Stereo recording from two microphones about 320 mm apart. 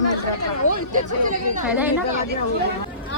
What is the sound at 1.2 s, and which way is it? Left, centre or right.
Speech, right.